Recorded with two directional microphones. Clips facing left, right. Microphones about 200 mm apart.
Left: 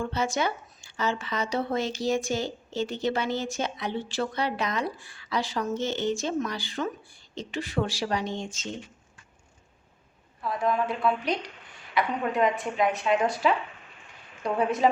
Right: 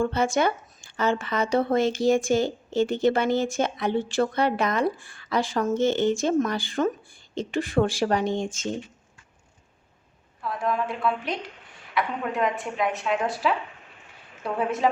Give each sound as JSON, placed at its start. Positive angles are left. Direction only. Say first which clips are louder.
{"t": 0.0, "sound": "a woman's voice", "louder": "right 5 dB", "side_deg": -55}
{"t": 10.4, "sound": "a woman's voice", "louder": "left 1 dB", "side_deg": 0}
{"t": 14.6, "sound": "a woman's voice", "louder": "left 1 dB", "side_deg": 0}